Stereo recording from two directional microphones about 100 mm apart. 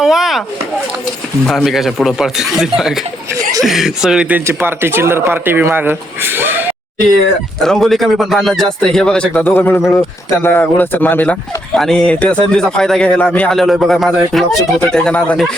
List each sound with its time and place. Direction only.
0.0 s chop: 5° right (ahead or behind)
1.5 s speech: centre (ahead or behind)
4.4 s speech: 20° right (ahead or behind)
7.6 s speech: 5° left (ahead or behind); by 11.3 s 20° left (ahead or behind)
11.7 s speech: 5° left (ahead or behind)
13.5 s speech: centre (ahead or behind)